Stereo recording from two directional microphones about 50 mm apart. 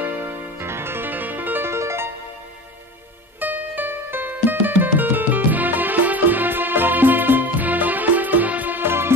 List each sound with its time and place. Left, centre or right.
0.0 s music: right
1.7 s music: right
3.3 s music: right
8.8 s music: right